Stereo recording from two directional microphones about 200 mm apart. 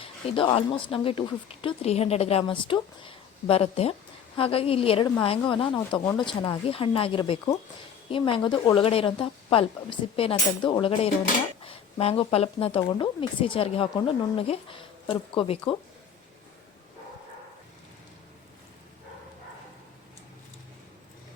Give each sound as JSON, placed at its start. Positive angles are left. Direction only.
{"t": 0.0, "sound": "speech", "side_deg": 25}